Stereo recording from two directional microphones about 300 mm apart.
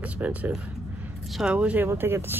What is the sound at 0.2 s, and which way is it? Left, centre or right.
Speech, centre.